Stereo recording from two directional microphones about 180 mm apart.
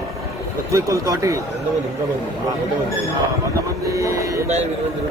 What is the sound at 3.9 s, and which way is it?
Speech, 15° right (ahead or behind).